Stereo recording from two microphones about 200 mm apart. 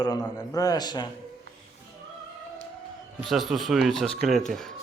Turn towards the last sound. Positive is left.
turn(degrees=0)  # may be behind; listen again after turning